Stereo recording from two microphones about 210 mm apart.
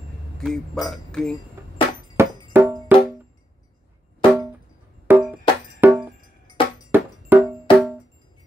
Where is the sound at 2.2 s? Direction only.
10° right (ahead or behind).